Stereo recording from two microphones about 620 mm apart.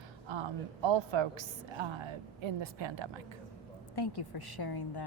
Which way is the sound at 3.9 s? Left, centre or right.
Left.